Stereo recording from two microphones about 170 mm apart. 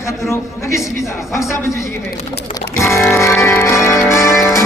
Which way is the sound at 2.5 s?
15° left (ahead or behind).